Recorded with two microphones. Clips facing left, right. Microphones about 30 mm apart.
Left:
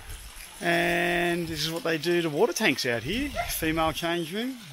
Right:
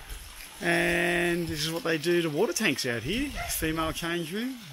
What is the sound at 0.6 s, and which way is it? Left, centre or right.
Speech, centre.